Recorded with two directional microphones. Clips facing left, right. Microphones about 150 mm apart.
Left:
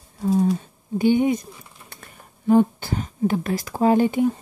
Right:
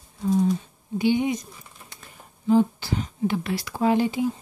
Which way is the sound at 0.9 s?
50° left (ahead or behind).